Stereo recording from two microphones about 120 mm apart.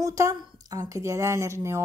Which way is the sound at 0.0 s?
25° right (ahead or behind).